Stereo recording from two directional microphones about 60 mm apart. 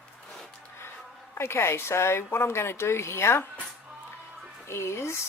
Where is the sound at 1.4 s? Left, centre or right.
Left.